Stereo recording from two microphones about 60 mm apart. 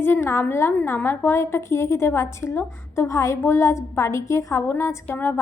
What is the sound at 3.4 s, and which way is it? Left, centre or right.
A woman's voice, left.